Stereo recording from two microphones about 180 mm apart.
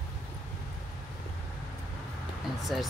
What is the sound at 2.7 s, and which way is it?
Speech, centre (ahead or behind).